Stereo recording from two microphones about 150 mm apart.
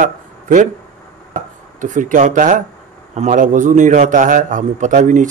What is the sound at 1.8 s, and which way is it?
A man's voice, 60° right (ahead or behind).